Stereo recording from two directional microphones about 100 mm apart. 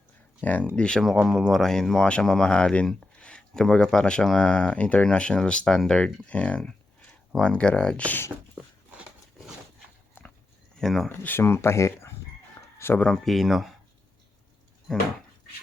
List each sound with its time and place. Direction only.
0.4 s speech: 15° left (ahead or behind)
10.8 s speech: centre (ahead or behind)
11.1 s speech: 20° left (ahead or behind)
13.1 s speech: centre (ahead or behind)